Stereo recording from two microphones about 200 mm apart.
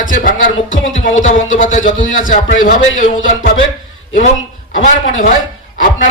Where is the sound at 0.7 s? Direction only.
75° left (ahead or behind).